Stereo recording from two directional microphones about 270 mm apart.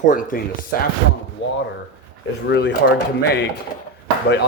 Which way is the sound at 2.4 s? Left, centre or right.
Left.